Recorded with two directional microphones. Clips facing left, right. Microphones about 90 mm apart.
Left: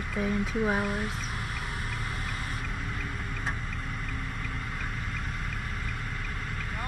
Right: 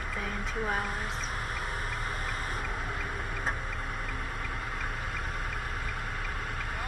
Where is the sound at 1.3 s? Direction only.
35° right (ahead or behind).